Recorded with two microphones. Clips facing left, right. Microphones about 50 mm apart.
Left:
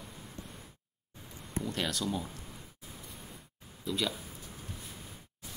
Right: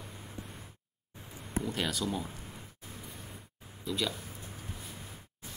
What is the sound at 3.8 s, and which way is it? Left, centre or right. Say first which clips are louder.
Speech: even; centre.